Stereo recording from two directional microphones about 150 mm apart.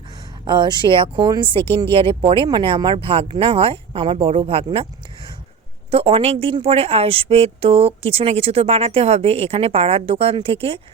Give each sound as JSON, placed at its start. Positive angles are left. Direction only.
{"t": 0.4, "sound": "a woman's voice", "side_deg": -30}
{"t": 5.9, "sound": "a woman's voice", "side_deg": -35}